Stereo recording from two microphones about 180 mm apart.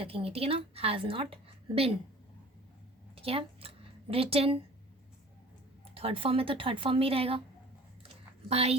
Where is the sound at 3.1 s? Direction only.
30° right (ahead or behind).